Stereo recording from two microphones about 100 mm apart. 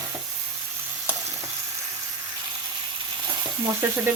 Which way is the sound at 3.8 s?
25° right (ahead or behind).